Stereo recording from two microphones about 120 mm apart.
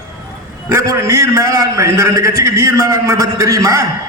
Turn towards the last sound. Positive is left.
turn(degrees=-25)  # may be behind; listen again after turning